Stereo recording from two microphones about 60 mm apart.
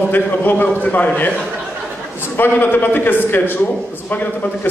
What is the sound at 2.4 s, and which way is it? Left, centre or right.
A man's voice, left.